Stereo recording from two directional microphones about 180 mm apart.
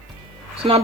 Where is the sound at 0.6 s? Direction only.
35° right (ahead or behind).